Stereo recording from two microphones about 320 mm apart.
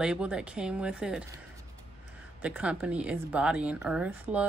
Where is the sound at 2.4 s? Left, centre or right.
Centre.